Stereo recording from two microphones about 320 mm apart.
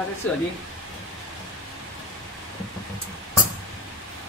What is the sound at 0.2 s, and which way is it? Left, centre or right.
Speech, centre.